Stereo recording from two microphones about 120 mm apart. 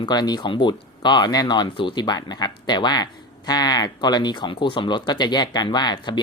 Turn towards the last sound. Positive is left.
turn(degrees=35)  # may be behind; listen again after turning